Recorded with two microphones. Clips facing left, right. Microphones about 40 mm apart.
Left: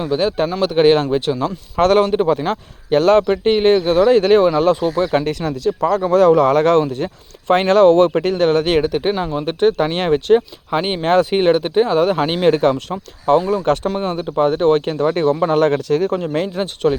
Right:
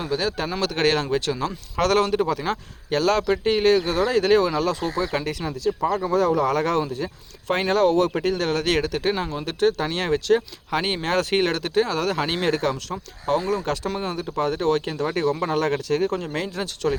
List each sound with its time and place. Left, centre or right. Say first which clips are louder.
0.1 s speech: left 8 dB; left; by 1.8 s centre
1.8 s speech: left 6 dB; left
10.7 s speech: left 7 dB; centre; by 16.1 s left
16.1 s speech: left 7 dB; left